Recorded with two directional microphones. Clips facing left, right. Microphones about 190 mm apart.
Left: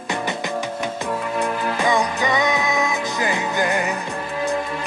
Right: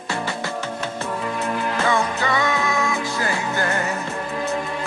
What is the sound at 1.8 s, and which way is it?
Music, 15° left (ahead or behind).